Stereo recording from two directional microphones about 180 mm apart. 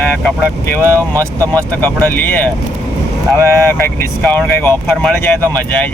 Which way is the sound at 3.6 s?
15° left (ahead or behind).